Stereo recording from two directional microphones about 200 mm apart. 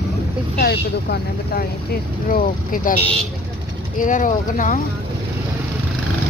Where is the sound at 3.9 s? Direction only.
40° left (ahead or behind).